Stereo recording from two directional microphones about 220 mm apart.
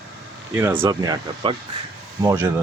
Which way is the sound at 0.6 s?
10° right (ahead or behind).